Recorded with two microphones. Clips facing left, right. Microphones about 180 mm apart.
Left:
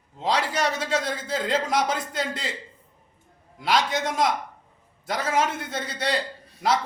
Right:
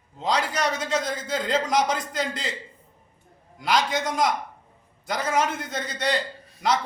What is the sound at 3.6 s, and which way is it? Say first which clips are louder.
A man's voice: even; centre (ahead or behind).